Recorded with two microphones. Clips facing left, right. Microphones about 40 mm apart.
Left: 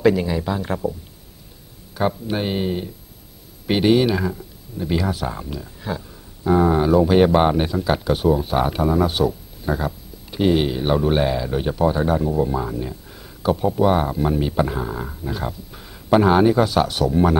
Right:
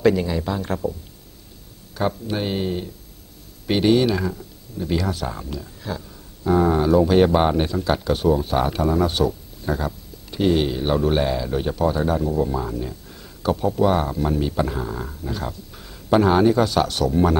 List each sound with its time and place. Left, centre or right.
0.0 s speech: centre
2.0 s speech: centre